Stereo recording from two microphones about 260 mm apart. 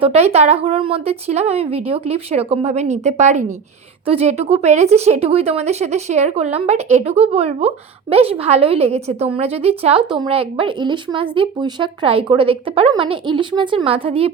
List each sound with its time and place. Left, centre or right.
0.0 s a woman's voice: right